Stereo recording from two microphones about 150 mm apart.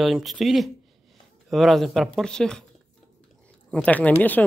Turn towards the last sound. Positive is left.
turn(degrees=10)  # may be behind; listen again after turning